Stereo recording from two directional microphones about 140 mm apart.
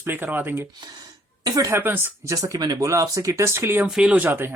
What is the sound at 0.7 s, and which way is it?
Speech, 30° right (ahead or behind).